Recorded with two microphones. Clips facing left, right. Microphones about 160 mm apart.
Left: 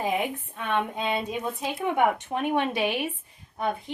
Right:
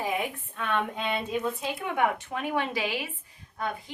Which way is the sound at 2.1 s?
20° left (ahead or behind).